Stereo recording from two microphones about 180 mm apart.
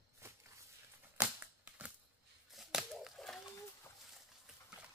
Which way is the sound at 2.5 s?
Centre (ahead or behind).